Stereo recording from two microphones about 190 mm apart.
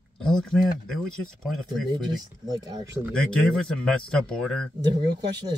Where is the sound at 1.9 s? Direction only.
20° right (ahead or behind).